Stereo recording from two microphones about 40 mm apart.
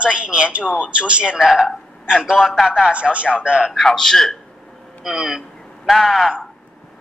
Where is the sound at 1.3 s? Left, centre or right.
Centre.